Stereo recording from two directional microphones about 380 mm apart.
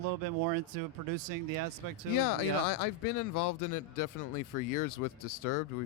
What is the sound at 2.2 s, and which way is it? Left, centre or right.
Speech, left.